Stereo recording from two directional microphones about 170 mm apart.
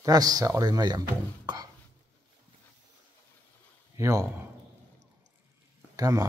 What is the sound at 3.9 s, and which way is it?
Speech, 20° right (ahead or behind).